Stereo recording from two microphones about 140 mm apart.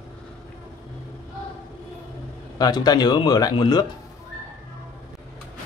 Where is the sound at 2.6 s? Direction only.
30° left (ahead or behind).